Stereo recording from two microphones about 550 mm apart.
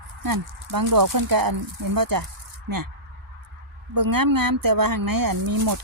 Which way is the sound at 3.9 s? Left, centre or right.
Right.